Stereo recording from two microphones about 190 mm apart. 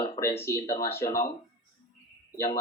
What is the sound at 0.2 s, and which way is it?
Speech, 15° left (ahead or behind).